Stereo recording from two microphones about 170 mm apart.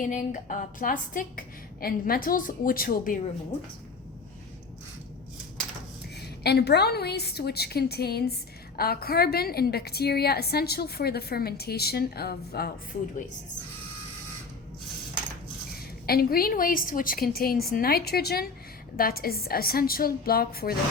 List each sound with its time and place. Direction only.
0.0 s a woman's voice: 50° left (ahead or behind)
6.4 s a woman's voice: 75° left (ahead or behind)
16.0 s a woman's voice: 60° left (ahead or behind)